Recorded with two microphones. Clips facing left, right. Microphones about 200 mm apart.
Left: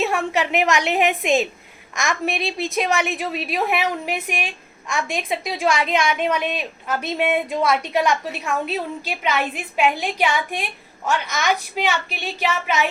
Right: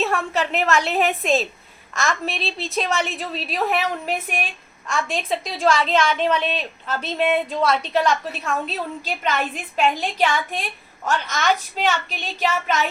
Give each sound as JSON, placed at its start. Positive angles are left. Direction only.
{"t": 0.0, "sound": "a woman's voice", "side_deg": 15}